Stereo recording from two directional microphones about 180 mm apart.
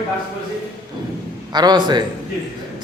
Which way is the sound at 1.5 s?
25° right (ahead or behind).